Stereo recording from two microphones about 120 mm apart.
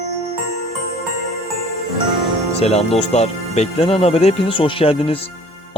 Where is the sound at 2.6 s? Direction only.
60° left (ahead or behind).